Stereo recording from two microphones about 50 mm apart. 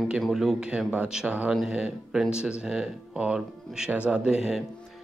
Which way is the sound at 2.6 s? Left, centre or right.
Centre.